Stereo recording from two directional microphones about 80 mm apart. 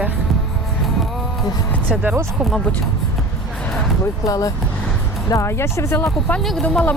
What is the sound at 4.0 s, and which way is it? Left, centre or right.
Speech, left.